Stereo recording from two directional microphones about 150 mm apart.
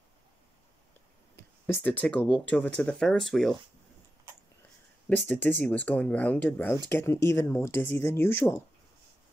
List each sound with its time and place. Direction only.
1.7 s speech: 15° left (ahead or behind)
5.1 s speech: 10° left (ahead or behind)